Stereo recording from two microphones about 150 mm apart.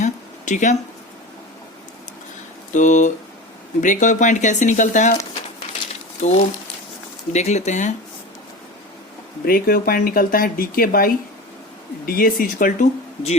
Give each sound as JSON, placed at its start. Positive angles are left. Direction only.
{"t": 0.0, "sound": "a sound", "side_deg": 55}
{"t": 2.7, "sound": "speech", "side_deg": 55}
{"t": 6.2, "sound": "speech", "side_deg": 50}
{"t": 9.5, "sound": "speech", "side_deg": 80}